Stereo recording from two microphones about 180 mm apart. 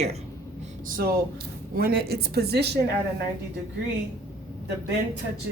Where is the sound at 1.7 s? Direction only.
60° right (ahead or behind).